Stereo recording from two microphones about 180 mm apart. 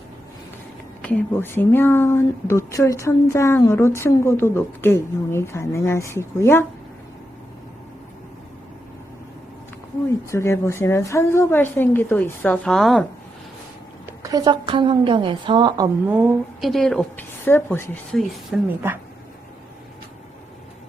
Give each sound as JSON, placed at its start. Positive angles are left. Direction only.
{"t": 1.0, "sound": "speech", "side_deg": 10}
{"t": 10.3, "sound": "speech", "side_deg": 15}
{"t": 14.2, "sound": "a woman's voice", "side_deg": -20}
{"t": 16.0, "sound": "a woman's voice", "side_deg": -10}
{"t": 16.6, "sound": "speech", "side_deg": 0}
{"t": 18.5, "sound": "a woman's voice", "side_deg": -5}